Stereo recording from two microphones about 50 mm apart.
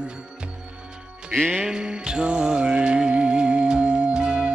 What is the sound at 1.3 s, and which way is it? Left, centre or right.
Music, centre.